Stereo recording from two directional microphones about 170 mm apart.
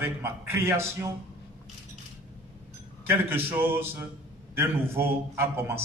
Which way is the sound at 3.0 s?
10° right (ahead or behind).